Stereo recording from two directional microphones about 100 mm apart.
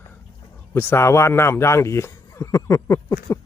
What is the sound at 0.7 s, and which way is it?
A man's voice, 25° left (ahead or behind).